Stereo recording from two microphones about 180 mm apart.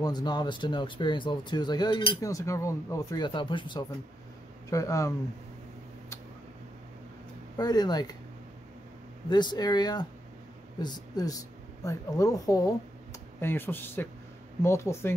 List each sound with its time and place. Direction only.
0.0 s speech: 25° left (ahead or behind)
7.5 s speech: 20° left (ahead or behind)
9.3 s speech: 25° left (ahead or behind)